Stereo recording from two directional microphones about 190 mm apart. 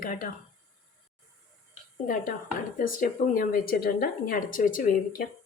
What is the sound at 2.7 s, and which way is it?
A woman's voice, 45° left (ahead or behind).